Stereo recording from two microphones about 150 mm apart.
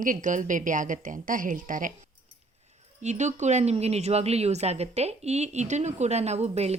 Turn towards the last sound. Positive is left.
turn(degrees=-45)  # may be behind; listen again after turning